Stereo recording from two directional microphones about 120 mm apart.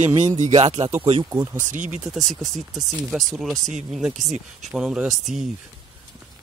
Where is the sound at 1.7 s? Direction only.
90° right.